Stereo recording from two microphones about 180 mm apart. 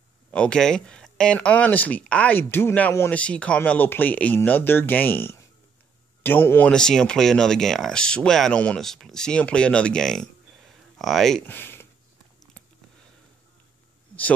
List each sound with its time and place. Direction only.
0.3 s speech: 5° left (ahead or behind)